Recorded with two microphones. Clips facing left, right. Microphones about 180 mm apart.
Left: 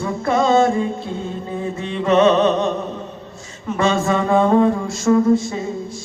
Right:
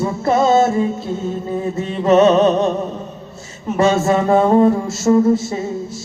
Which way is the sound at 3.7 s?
40° right (ahead or behind).